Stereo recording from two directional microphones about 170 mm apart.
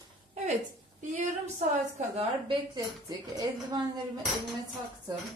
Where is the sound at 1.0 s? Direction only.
45° right (ahead or behind).